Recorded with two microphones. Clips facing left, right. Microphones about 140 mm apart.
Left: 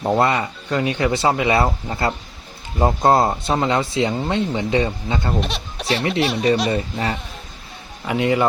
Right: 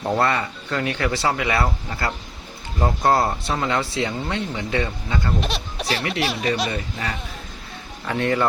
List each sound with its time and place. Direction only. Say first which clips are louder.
0.0 s speech: left 3 dB; 20° left (ahead or behind)
5.4 s speech: left 1 dB; centre (ahead or behind)
6.0 s speech: left 7 dB; 30° left (ahead or behind)
8.0 s speech: left 3 dB; 15° left (ahead or behind)